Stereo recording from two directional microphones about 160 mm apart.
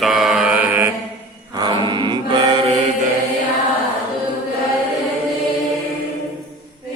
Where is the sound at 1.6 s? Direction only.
25° right (ahead or behind).